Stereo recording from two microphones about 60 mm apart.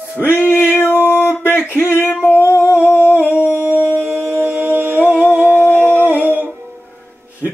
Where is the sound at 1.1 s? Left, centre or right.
Left.